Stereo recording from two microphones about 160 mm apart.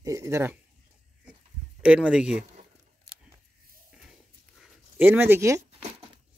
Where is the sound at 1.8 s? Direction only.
5° right (ahead or behind).